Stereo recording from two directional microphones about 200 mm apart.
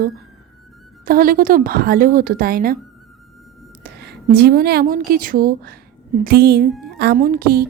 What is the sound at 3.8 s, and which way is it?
A woman's voice, 55° right (ahead or behind).